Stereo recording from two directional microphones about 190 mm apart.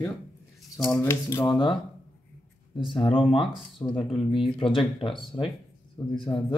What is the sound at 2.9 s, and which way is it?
Speech, 25° left (ahead or behind).